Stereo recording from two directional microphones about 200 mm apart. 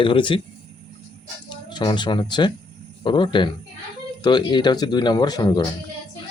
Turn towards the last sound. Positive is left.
turn(degrees=20)  # may be behind; listen again after turning